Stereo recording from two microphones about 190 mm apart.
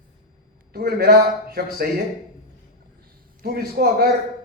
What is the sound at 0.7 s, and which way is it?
Speech, 55° right (ahead or behind).